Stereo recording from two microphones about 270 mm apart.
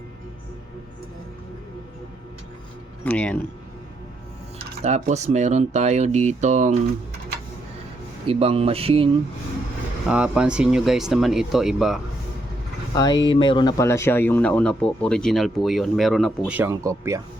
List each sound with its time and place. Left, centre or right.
3.0 s speech: centre
4.5 s speech: right
8.3 s speech: right
10.1 s speech: centre
12.9 s speech: centre